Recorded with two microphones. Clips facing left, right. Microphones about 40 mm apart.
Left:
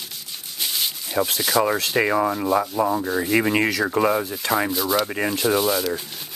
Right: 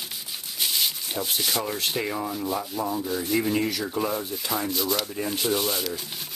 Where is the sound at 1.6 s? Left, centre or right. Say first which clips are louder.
Left 15 dB; left.